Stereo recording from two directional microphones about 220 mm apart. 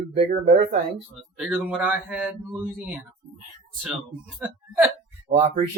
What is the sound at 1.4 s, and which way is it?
A woman's voice, 5° right (ahead or behind).